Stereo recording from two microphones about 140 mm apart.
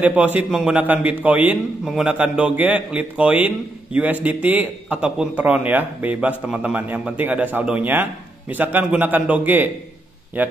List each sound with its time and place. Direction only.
0.0 s a man's voice: 10° right (ahead or behind)